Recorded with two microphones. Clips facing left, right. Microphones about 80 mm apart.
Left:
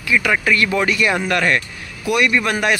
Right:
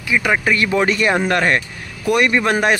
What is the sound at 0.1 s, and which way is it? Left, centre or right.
A man's voice, right.